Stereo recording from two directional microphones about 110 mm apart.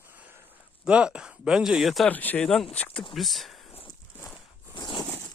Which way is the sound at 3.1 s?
Centre (ahead or behind).